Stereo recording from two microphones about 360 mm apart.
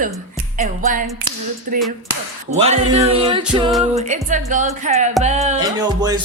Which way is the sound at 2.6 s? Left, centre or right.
Centre.